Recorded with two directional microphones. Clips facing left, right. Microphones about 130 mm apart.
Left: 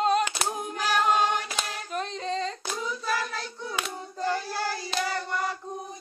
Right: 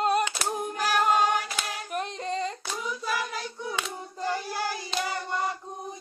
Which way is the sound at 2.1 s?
15° right (ahead or behind).